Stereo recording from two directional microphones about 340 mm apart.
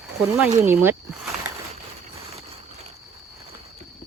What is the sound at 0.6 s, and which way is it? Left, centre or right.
Speech, centre.